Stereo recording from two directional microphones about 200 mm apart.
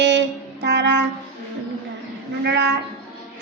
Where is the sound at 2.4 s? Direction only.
60° right (ahead or behind).